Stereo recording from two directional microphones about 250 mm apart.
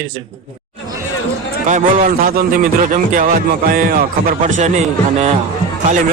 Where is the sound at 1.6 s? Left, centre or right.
Right.